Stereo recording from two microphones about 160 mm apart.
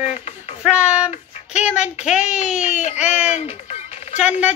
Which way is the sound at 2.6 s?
45° left (ahead or behind).